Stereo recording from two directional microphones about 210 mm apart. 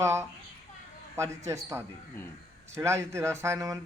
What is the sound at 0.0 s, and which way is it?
Speech, 10° right (ahead or behind).